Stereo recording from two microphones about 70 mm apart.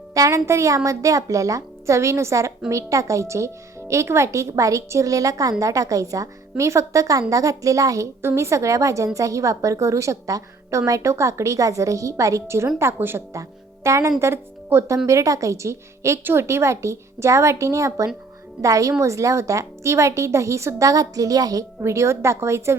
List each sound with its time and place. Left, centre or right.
0.1 s a woman's voice: right
8.2 s a woman's voice: right
12.8 s a woman's voice: right
13.3 s speech: right
14.9 s a woman's voice: right
21.8 s a woman's voice: right